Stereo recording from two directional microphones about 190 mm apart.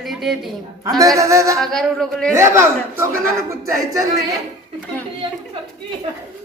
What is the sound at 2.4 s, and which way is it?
Speech, 15° right (ahead or behind).